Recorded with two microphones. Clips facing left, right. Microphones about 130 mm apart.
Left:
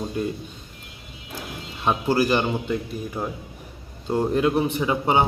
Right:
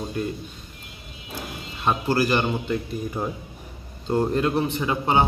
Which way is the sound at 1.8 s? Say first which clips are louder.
Left 1 dB; 15° left (ahead or behind).